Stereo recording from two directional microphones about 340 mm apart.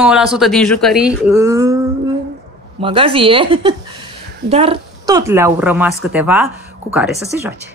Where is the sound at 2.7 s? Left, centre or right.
Centre.